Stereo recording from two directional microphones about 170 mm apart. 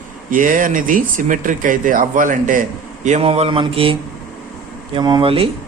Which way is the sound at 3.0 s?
40° right (ahead or behind).